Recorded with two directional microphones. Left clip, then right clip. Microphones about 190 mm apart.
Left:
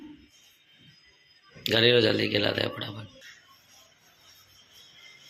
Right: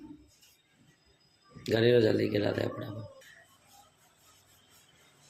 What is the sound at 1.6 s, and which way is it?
Speech, 10° right (ahead or behind).